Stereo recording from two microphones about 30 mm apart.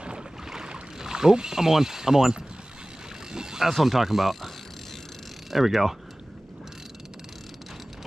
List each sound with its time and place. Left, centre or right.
0.9 s mechanisms: centre
3.3 s a sound: centre
3.7 s speech: centre
5.5 s speech: centre